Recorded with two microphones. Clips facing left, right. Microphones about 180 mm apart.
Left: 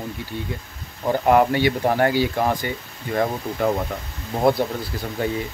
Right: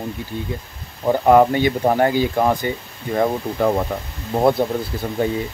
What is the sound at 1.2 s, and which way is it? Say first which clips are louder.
Speech: right 4 dB; 35° right (ahead or behind).